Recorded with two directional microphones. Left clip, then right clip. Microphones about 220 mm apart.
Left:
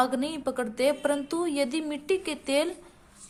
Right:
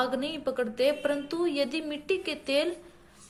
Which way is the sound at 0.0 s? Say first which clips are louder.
Left 2 dB; 25° left (ahead or behind).